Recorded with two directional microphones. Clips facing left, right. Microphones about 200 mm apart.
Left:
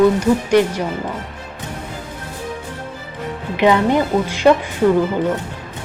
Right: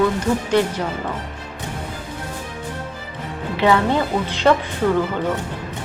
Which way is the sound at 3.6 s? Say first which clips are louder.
Left 3 dB; 15° left (ahead or behind).